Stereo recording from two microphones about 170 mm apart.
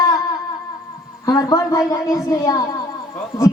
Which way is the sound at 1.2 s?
20° left (ahead or behind).